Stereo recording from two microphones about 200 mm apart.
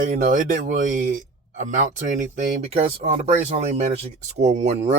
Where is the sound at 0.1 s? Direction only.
40° right (ahead or behind).